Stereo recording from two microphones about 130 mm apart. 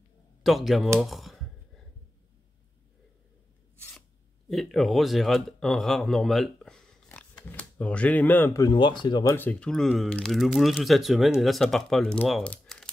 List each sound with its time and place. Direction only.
0.4 s speech: centre (ahead or behind)
4.5 s speech: centre (ahead or behind)
8.5 s speech: 35° left (ahead or behind)
9.4 s speech: 10° left (ahead or behind)
12.4 s crumpling: 5° left (ahead or behind)